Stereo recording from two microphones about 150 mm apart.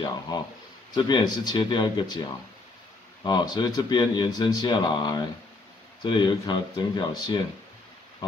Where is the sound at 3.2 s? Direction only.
30° left (ahead or behind).